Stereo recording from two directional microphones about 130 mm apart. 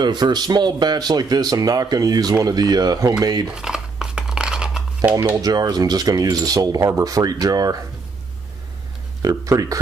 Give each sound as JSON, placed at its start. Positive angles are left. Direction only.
{"t": 0.0, "sound": "speech", "side_deg": -35}
{"t": 3.4, "sound": "a sound", "side_deg": -5}
{"t": 5.4, "sound": "speech", "side_deg": -30}
{"t": 9.2, "sound": "speech", "side_deg": -25}